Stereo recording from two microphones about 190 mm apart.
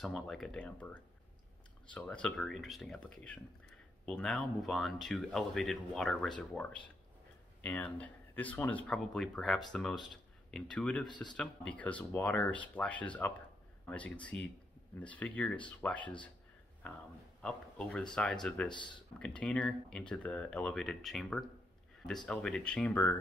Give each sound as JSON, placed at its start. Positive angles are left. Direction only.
{"t": 0.0, "sound": "speech", "side_deg": 0}
{"t": 11.1, "sound": "speech", "side_deg": 25}
{"t": 11.3, "sound": "speech", "side_deg": 5}
{"t": 17.4, "sound": "speech", "side_deg": 5}